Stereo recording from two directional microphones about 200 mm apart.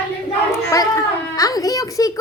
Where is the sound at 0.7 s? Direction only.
15° left (ahead or behind).